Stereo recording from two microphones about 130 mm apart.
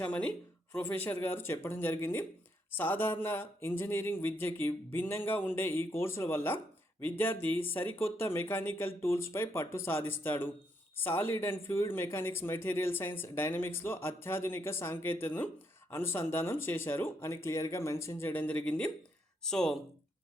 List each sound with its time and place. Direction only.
0.0 s speech: 10° left (ahead or behind)